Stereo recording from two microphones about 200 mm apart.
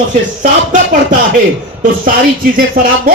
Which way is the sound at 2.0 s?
45° right (ahead or behind).